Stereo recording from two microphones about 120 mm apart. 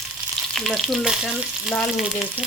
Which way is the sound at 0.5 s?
Centre (ahead or behind).